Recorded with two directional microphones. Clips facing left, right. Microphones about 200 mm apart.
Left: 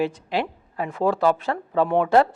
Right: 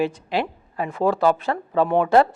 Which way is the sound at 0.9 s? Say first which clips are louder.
Right 1 dB; 20° right (ahead or behind).